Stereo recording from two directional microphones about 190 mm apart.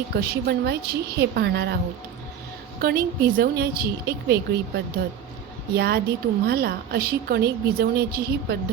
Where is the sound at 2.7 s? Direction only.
55° right (ahead or behind).